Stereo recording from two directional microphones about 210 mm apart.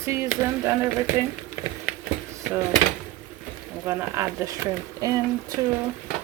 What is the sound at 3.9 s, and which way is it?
Speech, 10° right (ahead or behind).